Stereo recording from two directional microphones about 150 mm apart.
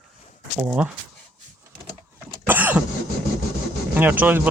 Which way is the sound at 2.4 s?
10° right (ahead or behind).